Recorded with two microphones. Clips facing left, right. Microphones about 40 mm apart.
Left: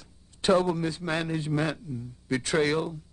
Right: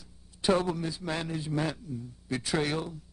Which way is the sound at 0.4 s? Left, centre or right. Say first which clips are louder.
Left 4 dB; left.